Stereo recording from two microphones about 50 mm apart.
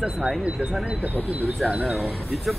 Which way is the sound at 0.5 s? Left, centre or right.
Centre.